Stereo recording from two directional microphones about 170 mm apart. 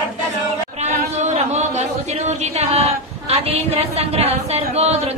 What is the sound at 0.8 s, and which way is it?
Speech, 40° right (ahead or behind).